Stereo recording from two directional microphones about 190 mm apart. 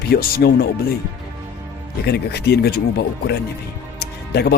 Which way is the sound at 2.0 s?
60° left (ahead or behind).